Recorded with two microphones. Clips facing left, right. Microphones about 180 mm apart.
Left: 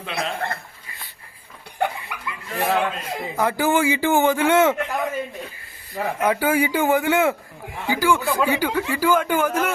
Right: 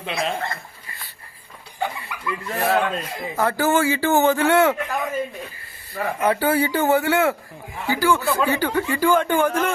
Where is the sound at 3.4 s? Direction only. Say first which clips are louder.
Even; 15° left (ahead or behind).